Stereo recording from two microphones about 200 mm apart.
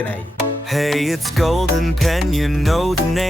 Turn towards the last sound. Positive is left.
turn(degrees=0)  # may be behind; listen again after turning